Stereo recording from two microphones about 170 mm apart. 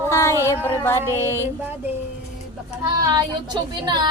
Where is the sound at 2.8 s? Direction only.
25° right (ahead or behind).